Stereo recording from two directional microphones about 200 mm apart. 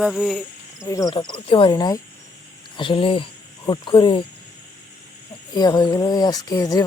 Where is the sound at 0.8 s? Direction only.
15° left (ahead or behind).